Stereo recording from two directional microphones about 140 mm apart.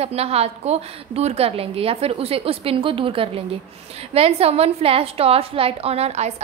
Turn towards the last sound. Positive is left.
turn(degrees=-50)  # may be behind; listen again after turning